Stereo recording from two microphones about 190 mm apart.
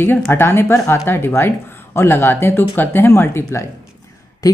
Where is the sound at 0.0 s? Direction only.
10° left (ahead or behind).